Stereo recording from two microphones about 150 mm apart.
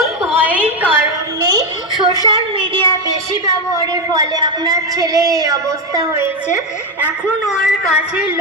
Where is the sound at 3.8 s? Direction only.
25° right (ahead or behind).